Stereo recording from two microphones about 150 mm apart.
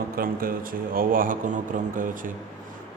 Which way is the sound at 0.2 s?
85° right.